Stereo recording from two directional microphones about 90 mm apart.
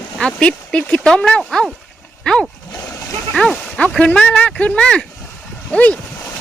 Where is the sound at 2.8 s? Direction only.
35° left (ahead or behind).